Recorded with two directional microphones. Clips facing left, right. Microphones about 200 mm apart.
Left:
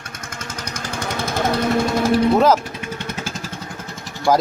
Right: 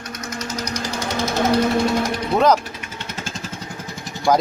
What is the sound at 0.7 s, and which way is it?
Jackhammer, 50° left (ahead or behind).